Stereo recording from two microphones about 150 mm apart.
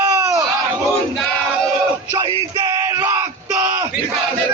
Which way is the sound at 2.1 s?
25° right (ahead or behind).